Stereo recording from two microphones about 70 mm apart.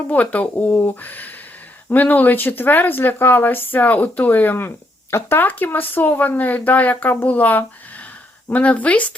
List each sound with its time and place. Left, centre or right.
0.1 s speech: centre